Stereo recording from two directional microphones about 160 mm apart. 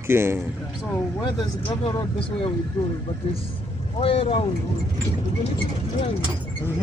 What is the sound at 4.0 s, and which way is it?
Speech, 35° left (ahead or behind).